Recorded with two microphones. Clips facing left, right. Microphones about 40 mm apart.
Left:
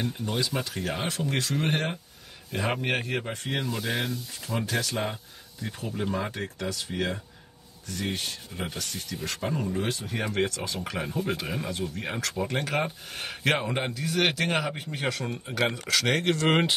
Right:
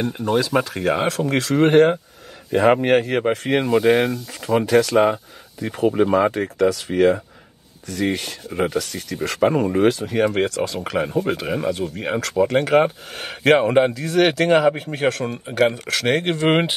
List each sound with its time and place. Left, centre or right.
0.4 s speech: right
1.0 s speech: right
2.5 s speech: right
9.2 s speech: right
10.2 s speech: right
10.5 s speech: right
11.4 s speech: right
15.5 s speech: right
15.9 s speech: right